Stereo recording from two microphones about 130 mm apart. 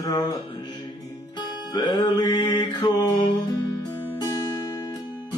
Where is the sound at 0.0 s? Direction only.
30° left (ahead or behind).